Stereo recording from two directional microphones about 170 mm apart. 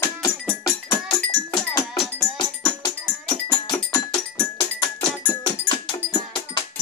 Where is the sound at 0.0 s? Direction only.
20° left (ahead or behind).